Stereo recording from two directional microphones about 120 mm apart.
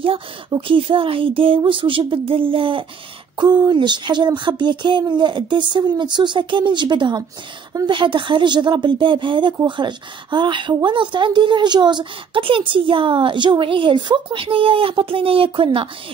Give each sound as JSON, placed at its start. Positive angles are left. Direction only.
{"t": 0.0, "sound": "a woman's voice", "side_deg": -45}
{"t": 3.3, "sound": "a sound", "side_deg": -35}
{"t": 9.7, "sound": "a woman's voice", "side_deg": -40}